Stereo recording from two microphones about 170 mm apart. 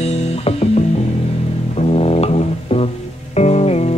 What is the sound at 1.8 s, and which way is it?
Music, 35° left (ahead or behind).